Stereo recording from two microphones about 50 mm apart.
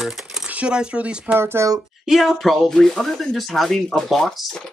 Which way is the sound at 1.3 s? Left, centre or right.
Right.